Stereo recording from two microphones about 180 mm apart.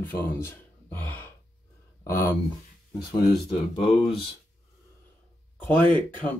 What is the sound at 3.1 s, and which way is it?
Speech, 30° left (ahead or behind).